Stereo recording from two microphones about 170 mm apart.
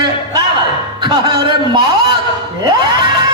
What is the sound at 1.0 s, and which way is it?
A man's voice, 25° right (ahead or behind).